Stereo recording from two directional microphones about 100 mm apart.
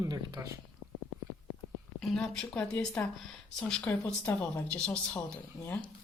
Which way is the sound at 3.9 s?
20° left (ahead or behind).